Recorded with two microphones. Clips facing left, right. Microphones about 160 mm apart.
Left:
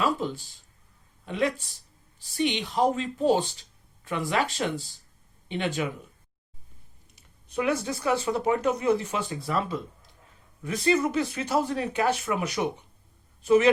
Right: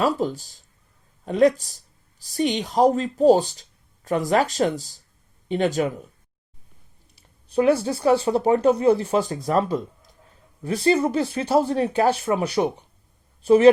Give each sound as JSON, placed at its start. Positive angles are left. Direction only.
{"t": 0.0, "sound": "speech", "side_deg": -40}
{"t": 7.2, "sound": "speech", "side_deg": -30}